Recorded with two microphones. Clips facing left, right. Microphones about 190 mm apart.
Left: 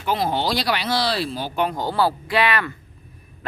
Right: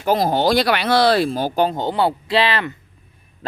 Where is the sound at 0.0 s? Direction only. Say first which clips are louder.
Right 5 dB; 40° right (ahead or behind).